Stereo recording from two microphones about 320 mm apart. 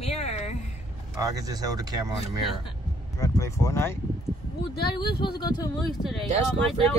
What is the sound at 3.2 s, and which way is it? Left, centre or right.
Speech, centre.